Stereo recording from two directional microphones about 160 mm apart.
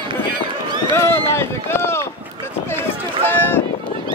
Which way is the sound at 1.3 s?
15° left (ahead or behind).